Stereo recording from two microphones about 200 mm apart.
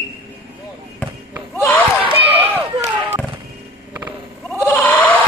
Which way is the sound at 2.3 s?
10° right (ahead or behind).